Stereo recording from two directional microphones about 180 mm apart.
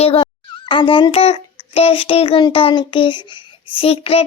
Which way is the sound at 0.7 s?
30° left (ahead or behind).